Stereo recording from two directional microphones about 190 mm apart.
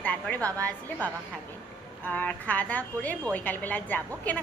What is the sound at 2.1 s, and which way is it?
A woman's voice, 5° left (ahead or behind).